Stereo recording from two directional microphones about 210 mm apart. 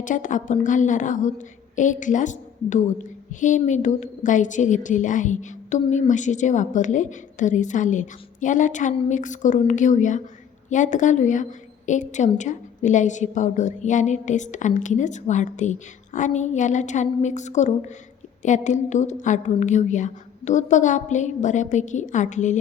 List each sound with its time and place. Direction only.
0.0 s a woman's voice: 35° left (ahead or behind)